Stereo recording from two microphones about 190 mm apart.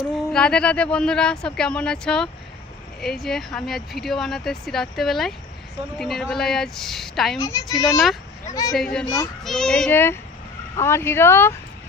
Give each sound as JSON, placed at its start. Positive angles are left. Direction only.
{"t": 0.3, "sound": "speech", "side_deg": 5}
{"t": 7.3, "sound": "speech", "side_deg": 15}
{"t": 7.7, "sound": "speech", "side_deg": 0}
{"t": 9.0, "sound": "speech", "side_deg": 15}
{"t": 9.4, "sound": "speech", "side_deg": 0}